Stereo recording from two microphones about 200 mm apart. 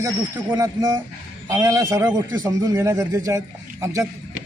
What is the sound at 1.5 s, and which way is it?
A man's voice, 15° right (ahead or behind).